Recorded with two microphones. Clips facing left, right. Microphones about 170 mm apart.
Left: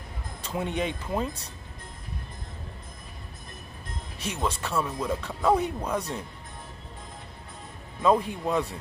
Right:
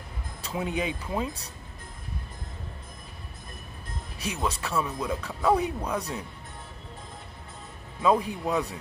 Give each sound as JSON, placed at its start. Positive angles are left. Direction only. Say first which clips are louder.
{"t": 0.5, "sound": "speech", "louder": "even", "side_deg": -10}
{"t": 4.4, "sound": "speech", "louder": "left 1 dB", "side_deg": -10}
{"t": 5.5, "sound": "speech", "louder": "even", "side_deg": 10}
{"t": 8.0, "sound": "speech", "louder": "left 1 dB", "side_deg": -10}